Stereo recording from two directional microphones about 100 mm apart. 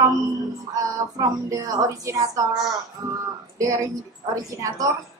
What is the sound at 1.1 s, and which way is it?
A woman's voice, 35° right (ahead or behind).